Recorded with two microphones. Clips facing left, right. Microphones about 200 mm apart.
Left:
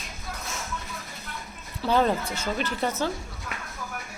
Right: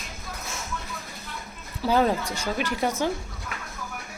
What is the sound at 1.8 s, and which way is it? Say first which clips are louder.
Speech: right 1 dB; 10° right (ahead or behind).